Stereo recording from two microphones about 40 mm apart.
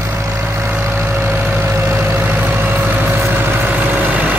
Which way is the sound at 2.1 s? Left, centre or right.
Right.